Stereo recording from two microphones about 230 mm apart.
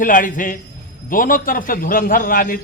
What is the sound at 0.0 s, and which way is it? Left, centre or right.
A man's voice, left.